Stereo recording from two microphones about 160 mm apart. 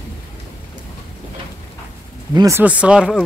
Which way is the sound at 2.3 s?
20° right (ahead or behind).